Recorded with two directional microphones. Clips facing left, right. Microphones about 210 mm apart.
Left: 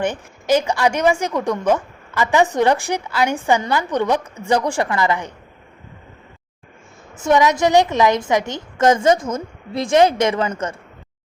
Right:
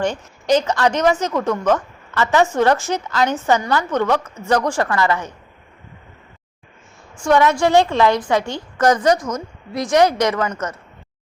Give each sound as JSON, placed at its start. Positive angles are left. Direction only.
{"t": 0.4, "sound": "a woman's voice", "side_deg": 10}
{"t": 7.2, "sound": "a woman's voice", "side_deg": 20}